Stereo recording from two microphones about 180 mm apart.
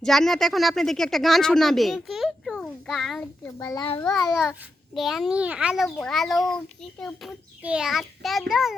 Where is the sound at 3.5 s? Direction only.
15° left (ahead or behind).